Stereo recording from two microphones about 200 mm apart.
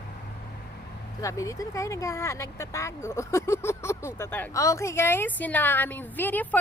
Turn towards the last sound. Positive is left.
turn(degrees=10)  # may be behind; listen again after turning